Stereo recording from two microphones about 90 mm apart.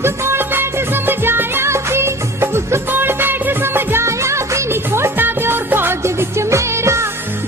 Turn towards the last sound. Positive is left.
turn(degrees=-30)  # may be behind; listen again after turning